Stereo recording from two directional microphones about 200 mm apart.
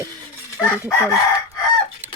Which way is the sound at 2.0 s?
10° right (ahead or behind).